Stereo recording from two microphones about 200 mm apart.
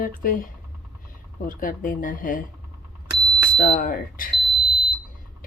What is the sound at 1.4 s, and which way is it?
Speech, 40° left (ahead or behind).